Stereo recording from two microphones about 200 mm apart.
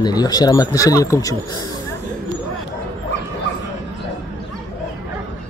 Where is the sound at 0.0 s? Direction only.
20° left (ahead or behind).